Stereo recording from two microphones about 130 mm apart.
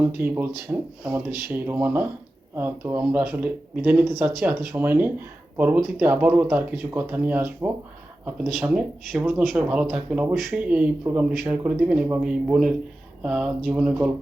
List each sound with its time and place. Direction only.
0.0 s speech: 15° right (ahead or behind)
4.7 s speech: 15° right (ahead or behind)